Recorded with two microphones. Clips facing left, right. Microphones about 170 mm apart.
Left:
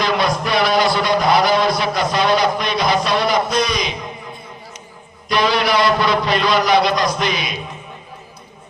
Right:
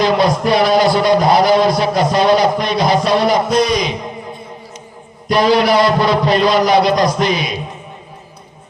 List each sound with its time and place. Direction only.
0.0 s a man's voice: 35° right (ahead or behind)
5.3 s a man's voice: 40° right (ahead or behind)